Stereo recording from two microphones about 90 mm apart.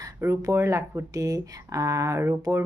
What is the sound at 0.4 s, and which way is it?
Speech, 30° right (ahead or behind).